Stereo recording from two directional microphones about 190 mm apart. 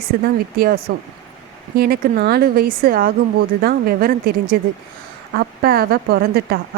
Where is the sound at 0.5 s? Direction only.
50° right (ahead or behind).